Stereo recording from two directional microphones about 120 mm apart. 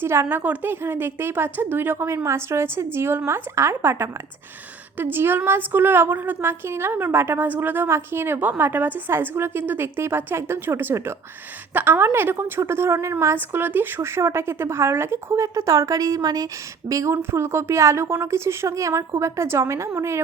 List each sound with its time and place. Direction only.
0.0 s a woman's voice: 20° right (ahead or behind)